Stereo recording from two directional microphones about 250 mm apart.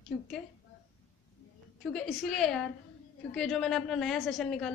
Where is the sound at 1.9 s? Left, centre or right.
Centre.